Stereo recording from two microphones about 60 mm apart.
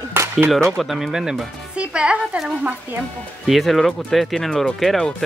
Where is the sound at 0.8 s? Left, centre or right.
Centre.